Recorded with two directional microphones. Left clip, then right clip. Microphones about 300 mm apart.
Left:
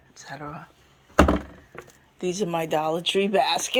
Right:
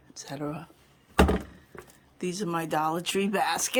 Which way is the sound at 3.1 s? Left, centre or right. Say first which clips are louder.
Left 7 dB; centre.